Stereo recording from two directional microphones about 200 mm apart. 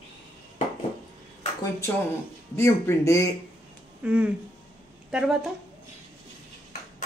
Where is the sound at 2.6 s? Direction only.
15° left (ahead or behind).